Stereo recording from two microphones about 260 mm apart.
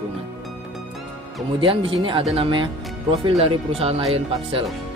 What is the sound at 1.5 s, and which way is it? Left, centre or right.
Speech, centre.